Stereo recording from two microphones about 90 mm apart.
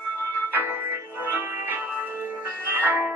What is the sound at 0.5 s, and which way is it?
Music, 20° right (ahead or behind).